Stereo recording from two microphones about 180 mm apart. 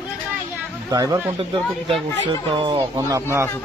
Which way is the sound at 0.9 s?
20° right (ahead or behind).